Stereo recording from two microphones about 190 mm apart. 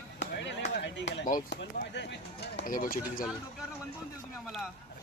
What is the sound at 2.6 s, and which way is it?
Speech, 45° left (ahead or behind).